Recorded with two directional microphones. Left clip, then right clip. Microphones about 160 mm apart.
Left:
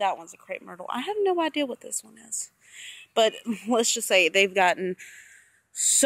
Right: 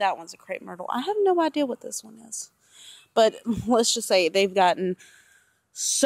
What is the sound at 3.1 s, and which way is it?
A woman's voice, 15° right (ahead or behind).